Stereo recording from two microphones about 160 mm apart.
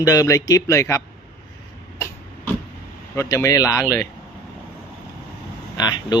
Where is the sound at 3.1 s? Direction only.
15° left (ahead or behind).